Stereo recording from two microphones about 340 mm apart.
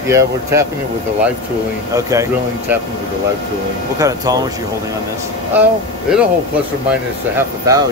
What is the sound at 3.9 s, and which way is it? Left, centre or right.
Speech, centre.